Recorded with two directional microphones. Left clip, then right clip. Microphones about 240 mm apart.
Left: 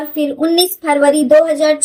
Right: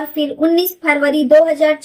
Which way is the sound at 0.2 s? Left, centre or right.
Left.